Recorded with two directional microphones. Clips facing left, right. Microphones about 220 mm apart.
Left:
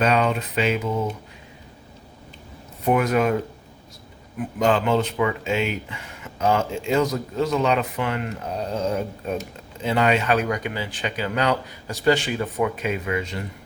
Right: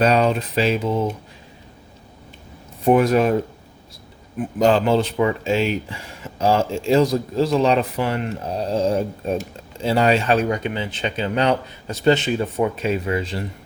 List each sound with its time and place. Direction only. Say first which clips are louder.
0.0 s speech: right 3 dB; 35° right (ahead or behind)
2.8 s speech: right 4 dB; 30° right (ahead or behind)
4.4 s speech: right 4 dB; 35° right (ahead or behind)